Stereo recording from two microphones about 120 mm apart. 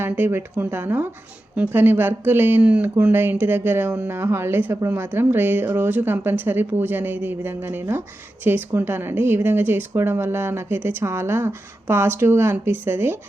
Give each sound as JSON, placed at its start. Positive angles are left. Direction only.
{"t": 0.0, "sound": "a woman's voice", "side_deg": -20}